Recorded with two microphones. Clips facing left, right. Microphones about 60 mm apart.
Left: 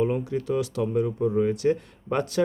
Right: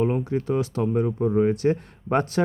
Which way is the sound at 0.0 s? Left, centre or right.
Right.